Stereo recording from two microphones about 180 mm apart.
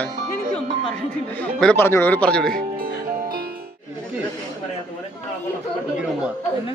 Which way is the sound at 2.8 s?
55° right (ahead or behind).